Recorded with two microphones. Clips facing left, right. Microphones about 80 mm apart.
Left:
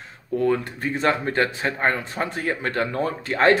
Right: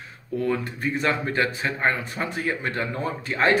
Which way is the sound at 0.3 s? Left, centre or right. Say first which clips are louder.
Left 4 dB; left.